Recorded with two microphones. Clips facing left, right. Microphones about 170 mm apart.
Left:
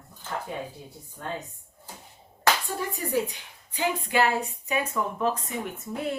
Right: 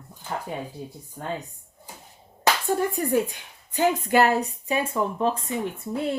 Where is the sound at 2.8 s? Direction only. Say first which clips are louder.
Right 5 dB; 50° right (ahead or behind).